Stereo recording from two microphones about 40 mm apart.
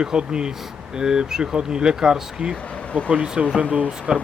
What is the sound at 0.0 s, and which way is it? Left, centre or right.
Speech, right.